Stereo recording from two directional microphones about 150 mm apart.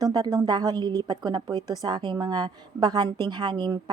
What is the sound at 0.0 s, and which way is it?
A woman's voice, 25° right (ahead or behind).